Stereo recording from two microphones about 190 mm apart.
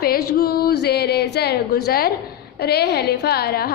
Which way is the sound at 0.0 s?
55° left (ahead or behind).